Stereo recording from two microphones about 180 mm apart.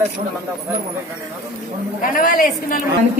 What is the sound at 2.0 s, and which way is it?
Speech, 50° left (ahead or behind).